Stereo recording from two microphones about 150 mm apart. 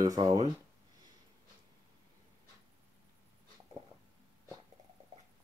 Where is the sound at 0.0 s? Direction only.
20° right (ahead or behind).